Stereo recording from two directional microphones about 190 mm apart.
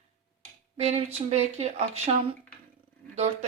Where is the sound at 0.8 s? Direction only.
35° right (ahead or behind).